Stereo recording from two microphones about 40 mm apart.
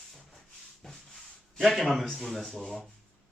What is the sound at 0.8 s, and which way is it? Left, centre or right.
Rub, centre.